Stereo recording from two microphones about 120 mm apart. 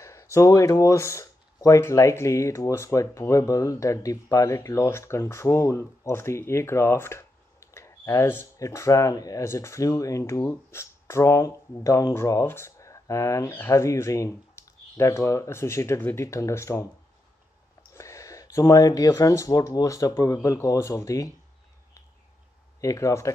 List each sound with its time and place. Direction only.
0.0 s speech: 25° left (ahead or behind)
17.9 s speech: 25° left (ahead or behind)
22.8 s speech: 25° left (ahead or behind)